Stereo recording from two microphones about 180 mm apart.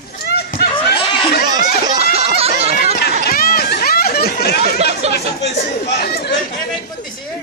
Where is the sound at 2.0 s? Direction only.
35° right (ahead or behind).